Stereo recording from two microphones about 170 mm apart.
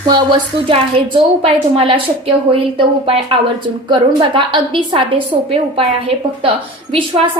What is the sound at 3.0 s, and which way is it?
A woman's voice, 35° right (ahead or behind).